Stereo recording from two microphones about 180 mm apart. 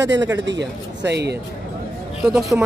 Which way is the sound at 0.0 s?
80° right.